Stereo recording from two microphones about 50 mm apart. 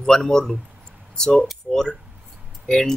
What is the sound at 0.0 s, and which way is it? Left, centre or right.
Speech, centre.